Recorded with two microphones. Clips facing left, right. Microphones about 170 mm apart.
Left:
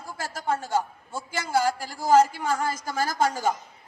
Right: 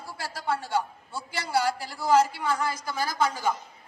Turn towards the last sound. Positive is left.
turn(degrees=45)  # may be behind; listen again after turning